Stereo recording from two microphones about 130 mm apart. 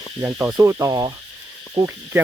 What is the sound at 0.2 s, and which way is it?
Speech, 20° right (ahead or behind).